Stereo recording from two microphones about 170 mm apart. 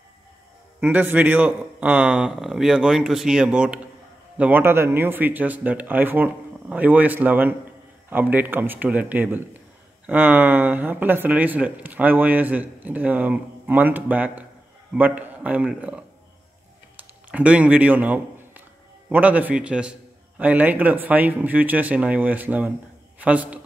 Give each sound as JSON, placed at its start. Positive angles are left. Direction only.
{"t": 0.7, "sound": "a man's voice", "side_deg": -10}
{"t": 16.9, "sound": "a sound", "side_deg": -10}
{"t": 19.0, "sound": "speech", "side_deg": -10}